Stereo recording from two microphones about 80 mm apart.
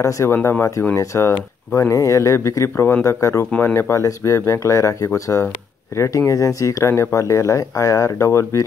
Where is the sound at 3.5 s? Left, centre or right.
Left.